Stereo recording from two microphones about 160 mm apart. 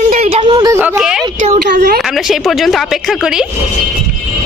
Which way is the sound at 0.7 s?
10° right (ahead or behind).